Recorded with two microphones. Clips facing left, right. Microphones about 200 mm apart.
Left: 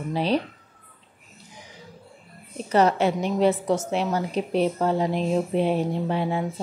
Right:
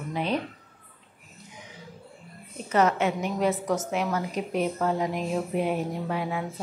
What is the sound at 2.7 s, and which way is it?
A woman's voice, 35° left (ahead or behind).